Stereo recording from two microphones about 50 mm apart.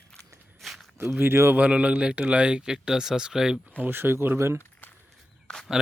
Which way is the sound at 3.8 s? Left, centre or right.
Right.